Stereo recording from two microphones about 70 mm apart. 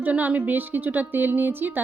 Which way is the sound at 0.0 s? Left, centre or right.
Right.